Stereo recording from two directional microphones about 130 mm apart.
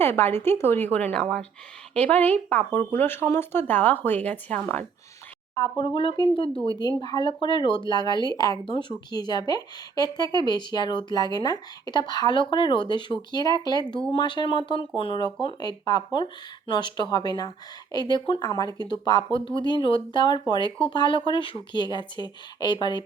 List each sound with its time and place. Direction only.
0.0 s speech: 15° left (ahead or behind)
5.5 s a woman's voice: 30° left (ahead or behind)